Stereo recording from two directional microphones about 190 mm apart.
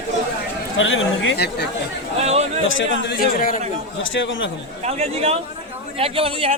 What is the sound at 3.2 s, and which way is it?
Speech, 50° left (ahead or behind).